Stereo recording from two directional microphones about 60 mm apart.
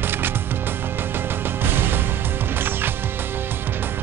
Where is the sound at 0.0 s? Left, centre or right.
Right.